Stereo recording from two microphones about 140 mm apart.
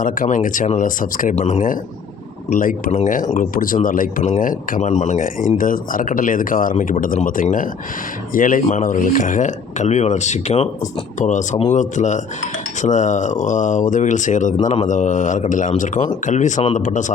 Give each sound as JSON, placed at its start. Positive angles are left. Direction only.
{"t": 0.0, "sound": "speech", "side_deg": 70}
{"t": 1.4, "sound": "speech", "side_deg": 50}
{"t": 2.6, "sound": "speech", "side_deg": 80}
{"t": 2.9, "sound": "speech", "side_deg": 65}
{"t": 3.3, "sound": "speech", "side_deg": 85}